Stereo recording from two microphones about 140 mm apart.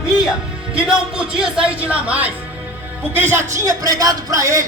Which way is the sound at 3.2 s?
15° right (ahead or behind).